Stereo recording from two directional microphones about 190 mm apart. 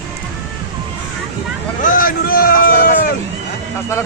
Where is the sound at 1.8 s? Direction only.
45° left (ahead or behind).